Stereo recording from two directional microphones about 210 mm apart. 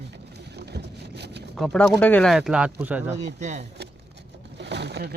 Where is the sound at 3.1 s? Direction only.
35° right (ahead or behind).